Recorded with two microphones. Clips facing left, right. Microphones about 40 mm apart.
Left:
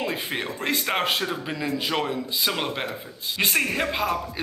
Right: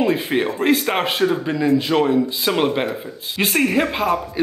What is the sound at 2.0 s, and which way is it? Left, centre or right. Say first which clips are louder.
A man's voice: right 8 dB; centre.